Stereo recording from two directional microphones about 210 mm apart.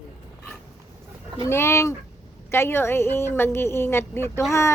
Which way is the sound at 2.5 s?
10° left (ahead or behind).